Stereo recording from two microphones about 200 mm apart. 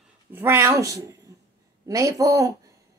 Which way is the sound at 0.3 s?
10° right (ahead or behind).